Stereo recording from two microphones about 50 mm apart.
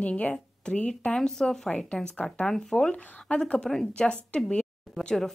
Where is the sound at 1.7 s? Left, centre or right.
Left.